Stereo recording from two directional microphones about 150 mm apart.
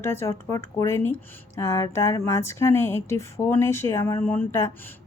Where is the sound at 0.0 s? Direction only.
15° left (ahead or behind).